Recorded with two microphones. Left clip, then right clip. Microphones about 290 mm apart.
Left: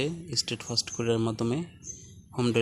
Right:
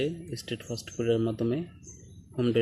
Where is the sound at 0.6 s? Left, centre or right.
Left.